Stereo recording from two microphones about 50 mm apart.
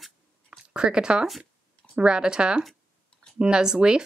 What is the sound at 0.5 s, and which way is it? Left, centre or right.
Zipper, centre.